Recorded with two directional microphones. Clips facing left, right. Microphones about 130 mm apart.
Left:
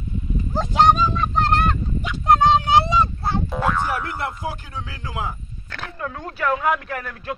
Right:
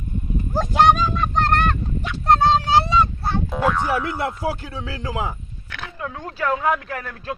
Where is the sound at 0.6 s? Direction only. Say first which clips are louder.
Even; centre (ahead or behind).